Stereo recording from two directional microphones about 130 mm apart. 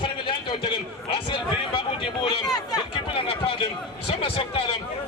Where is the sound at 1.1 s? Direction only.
40° left (ahead or behind).